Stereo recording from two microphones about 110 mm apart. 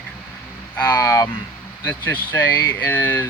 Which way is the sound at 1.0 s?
25° left (ahead or behind).